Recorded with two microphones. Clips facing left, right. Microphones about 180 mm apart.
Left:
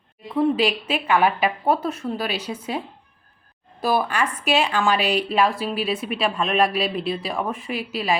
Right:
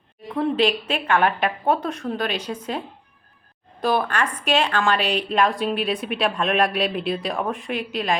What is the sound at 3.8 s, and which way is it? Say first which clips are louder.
A woman's voice: even; 5° left (ahead or behind).